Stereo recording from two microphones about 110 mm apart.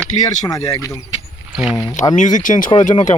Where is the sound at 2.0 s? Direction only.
90° left.